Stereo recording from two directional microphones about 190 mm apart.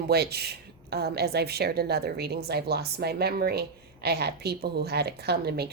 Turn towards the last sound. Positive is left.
turn(degrees=-55)  # may be behind; listen again after turning